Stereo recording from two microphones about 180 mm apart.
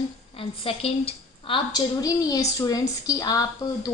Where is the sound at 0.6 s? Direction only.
30° left (ahead or behind).